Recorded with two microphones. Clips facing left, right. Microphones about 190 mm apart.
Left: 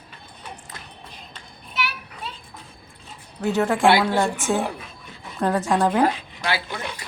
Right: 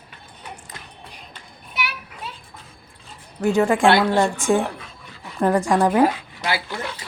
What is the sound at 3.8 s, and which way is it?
Speech, 5° left (ahead or behind).